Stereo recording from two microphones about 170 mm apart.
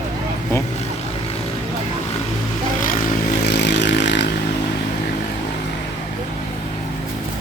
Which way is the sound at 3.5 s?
90° left.